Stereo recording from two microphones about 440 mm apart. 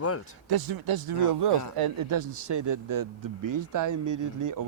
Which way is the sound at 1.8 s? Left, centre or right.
Right.